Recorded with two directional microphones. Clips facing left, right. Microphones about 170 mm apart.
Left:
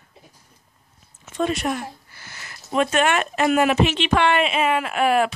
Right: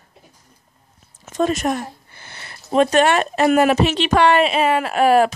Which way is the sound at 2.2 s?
30° right (ahead or behind).